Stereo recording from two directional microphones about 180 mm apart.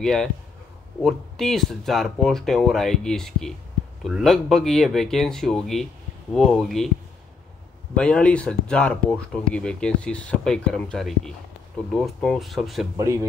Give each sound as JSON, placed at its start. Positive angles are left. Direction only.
{"t": 0.0, "sound": "speech", "side_deg": 5}
{"t": 7.9, "sound": "speech", "side_deg": 5}
{"t": 12.9, "sound": "speech", "side_deg": -15}